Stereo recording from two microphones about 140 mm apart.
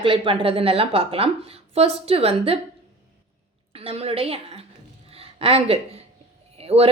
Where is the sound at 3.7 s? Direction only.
45° right (ahead or behind).